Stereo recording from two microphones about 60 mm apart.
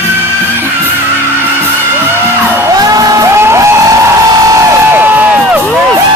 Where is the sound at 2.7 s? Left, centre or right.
Right.